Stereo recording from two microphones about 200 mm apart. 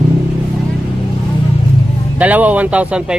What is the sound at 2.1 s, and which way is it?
Speech, 10° right (ahead or behind).